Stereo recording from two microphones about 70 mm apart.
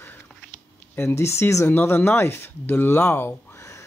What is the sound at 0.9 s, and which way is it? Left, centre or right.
Speech, left.